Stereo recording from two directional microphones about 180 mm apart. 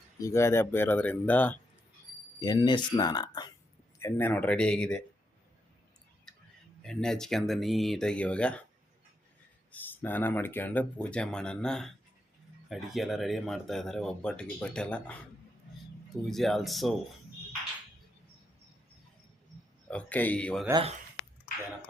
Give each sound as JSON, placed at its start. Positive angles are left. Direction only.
{"t": 0.2, "sound": "speech", "side_deg": 15}
{"t": 2.4, "sound": "speech", "side_deg": 20}
{"t": 4.0, "sound": "speech", "side_deg": 10}
{"t": 6.8, "sound": "speech", "side_deg": 5}
{"t": 9.7, "sound": "speech", "side_deg": 10}
{"t": 16.2, "sound": "speech", "side_deg": 0}
{"t": 19.9, "sound": "speech", "side_deg": 5}